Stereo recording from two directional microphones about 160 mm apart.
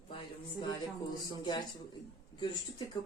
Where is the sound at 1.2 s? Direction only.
25° left (ahead or behind).